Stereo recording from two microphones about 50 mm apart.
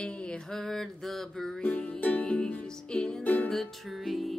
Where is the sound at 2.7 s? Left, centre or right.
Centre.